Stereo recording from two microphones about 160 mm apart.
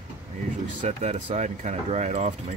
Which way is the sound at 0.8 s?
45° right (ahead or behind).